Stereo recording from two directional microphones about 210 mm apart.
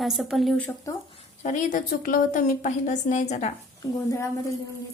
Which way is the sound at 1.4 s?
40° left (ahead or behind).